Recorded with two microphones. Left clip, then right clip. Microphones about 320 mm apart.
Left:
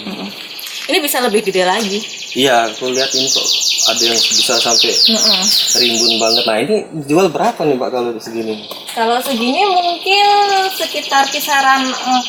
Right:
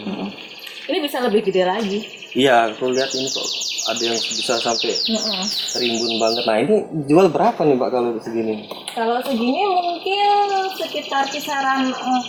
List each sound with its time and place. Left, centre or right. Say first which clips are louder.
0.9 s a woman's voice: left 5 dB; centre
9.0 s speech: left 5 dB; centre
9.4 s speech: left 6 dB; right
9.6 s speech: left 6 dB; centre